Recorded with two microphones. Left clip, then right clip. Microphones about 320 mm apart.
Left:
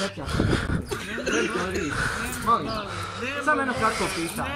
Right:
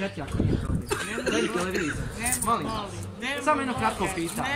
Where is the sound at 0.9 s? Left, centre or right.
Right.